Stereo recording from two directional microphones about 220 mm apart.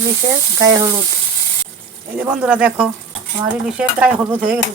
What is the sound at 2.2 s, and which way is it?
Speech, 5° right (ahead or behind).